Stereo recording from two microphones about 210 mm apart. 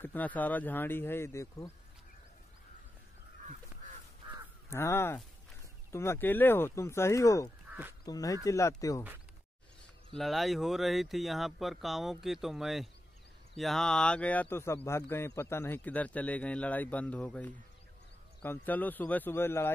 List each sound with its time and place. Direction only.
0.0 s speech: 10° left (ahead or behind)
4.6 s speech: 10° left (ahead or behind)
10.1 s speech: centre (ahead or behind)